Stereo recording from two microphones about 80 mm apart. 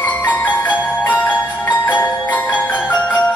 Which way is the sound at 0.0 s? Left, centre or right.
Left.